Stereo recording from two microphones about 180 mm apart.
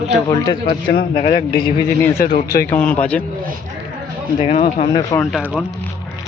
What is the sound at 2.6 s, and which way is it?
Speech, 10° left (ahead or behind).